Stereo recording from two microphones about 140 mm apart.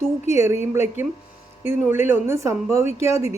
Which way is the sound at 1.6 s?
15° right (ahead or behind).